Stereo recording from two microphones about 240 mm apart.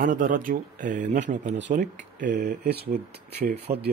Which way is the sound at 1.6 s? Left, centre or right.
Right.